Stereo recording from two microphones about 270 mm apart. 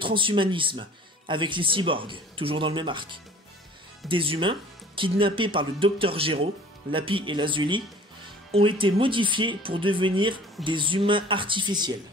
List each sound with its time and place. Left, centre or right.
0.0 s speech: centre